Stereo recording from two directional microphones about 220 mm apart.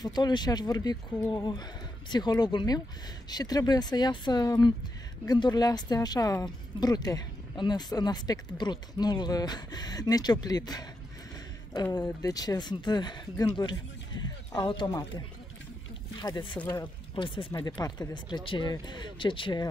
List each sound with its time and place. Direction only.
0.0 s a woman's voice: 20° left (ahead or behind)